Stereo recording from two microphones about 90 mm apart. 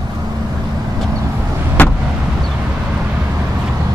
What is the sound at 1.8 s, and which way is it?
Vehicle, 20° left (ahead or behind).